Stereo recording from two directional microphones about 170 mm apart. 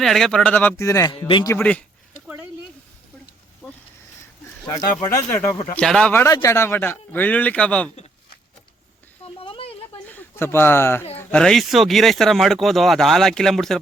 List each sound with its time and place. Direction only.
0.0 s speech: centre (ahead or behind); by 1.5 s 25° left (ahead or behind)
1.5 s a man's voice: 10° left (ahead or behind)
2.2 s a sound: 10° right (ahead or behind)
5.3 s a man's voice: 15° left (ahead or behind)
6.2 s a man's voice: 20° left (ahead or behind)
9.2 s a sound: 35° left (ahead or behind)
10.2 s speech: 15° left (ahead or behind)